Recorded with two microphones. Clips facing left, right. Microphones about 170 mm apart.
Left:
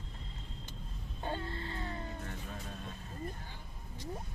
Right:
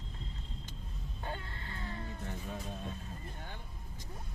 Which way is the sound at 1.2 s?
30° left (ahead or behind).